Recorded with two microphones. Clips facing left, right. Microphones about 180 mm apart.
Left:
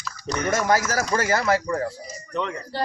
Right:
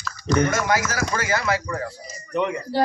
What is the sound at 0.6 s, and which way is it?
Speech, 35° left (ahead or behind).